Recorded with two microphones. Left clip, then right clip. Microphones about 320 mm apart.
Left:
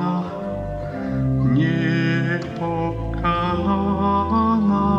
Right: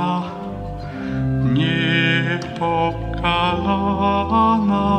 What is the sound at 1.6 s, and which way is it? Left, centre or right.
Music, right.